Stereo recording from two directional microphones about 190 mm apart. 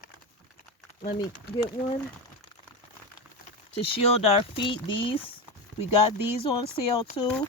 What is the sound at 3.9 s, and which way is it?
Speech, 30° left (ahead or behind).